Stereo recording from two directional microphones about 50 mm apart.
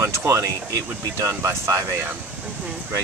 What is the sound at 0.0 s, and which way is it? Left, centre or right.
Speech, right.